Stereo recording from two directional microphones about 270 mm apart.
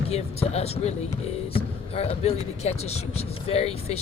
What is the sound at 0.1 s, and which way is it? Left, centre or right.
Speech, left.